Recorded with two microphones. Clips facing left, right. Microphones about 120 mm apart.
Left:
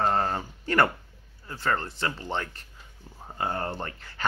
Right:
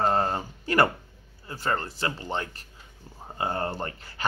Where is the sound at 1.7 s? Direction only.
35° right (ahead or behind).